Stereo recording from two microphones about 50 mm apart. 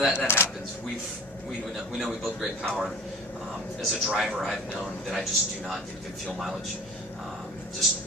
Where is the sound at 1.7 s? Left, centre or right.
Centre.